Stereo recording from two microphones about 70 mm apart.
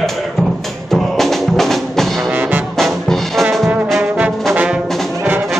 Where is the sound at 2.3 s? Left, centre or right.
Right.